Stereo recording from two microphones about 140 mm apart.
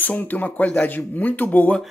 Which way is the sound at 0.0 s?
10° left (ahead or behind).